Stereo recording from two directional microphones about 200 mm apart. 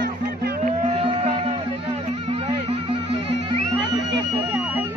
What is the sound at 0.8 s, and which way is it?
Music, 30° right (ahead or behind).